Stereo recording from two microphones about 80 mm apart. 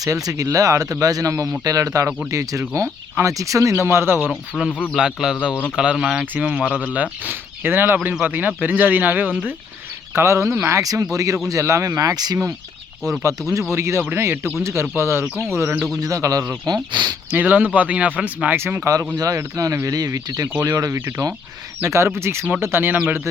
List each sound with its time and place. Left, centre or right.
0.0 s speech: right
3.8 s speech: right
4.1 s speech: centre
4.9 s speech: centre
10.2 s speech: right
13.0 s speech: right
16.0 s speech: right
16.6 s speech: right
17.3 s speech: centre
19.1 s speech: right